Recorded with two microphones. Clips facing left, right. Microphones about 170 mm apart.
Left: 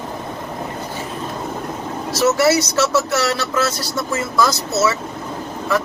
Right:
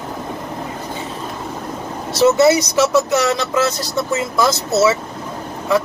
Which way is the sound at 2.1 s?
25° right (ahead or behind).